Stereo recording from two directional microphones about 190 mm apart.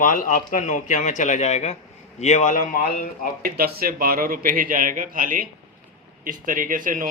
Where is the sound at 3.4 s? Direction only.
50° right (ahead or behind).